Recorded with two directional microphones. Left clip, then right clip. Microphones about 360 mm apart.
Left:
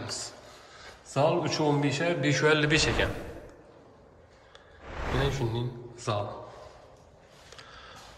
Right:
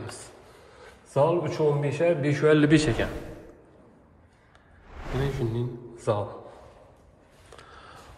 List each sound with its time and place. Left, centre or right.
1.1 s a man's voice: centre
5.3 s a man's voice: centre
7.5 s a sound: centre